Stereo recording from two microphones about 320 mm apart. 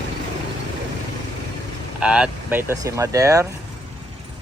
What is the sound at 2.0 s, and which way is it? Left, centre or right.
Speech, centre.